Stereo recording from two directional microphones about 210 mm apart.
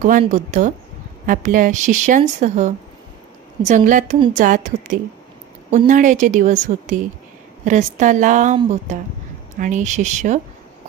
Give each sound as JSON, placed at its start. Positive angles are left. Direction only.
{"t": 0.2, "sound": "speech", "side_deg": -35}